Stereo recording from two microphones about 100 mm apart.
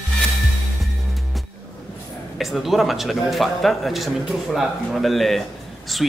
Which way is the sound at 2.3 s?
Centre (ahead or behind).